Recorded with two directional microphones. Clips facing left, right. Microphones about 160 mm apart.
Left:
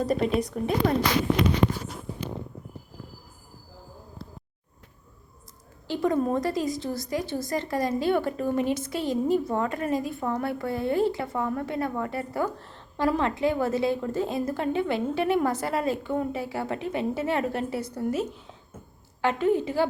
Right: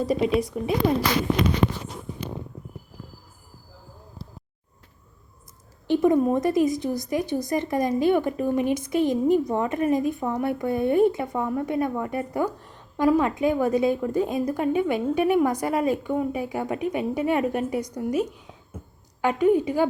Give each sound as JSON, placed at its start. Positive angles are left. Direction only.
{"t": 0.0, "sound": "speech", "side_deg": -5}
{"t": 5.9, "sound": "a woman's voice", "side_deg": -20}